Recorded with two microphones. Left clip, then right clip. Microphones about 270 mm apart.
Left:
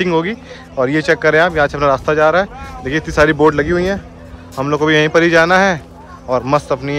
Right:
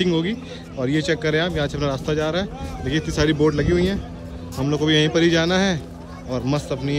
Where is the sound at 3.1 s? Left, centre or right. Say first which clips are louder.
Left 9 dB; left.